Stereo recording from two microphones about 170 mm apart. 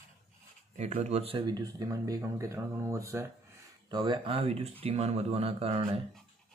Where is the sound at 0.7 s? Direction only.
40° right (ahead or behind).